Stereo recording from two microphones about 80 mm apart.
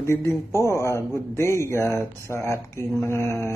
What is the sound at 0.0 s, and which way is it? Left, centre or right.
Speech, left.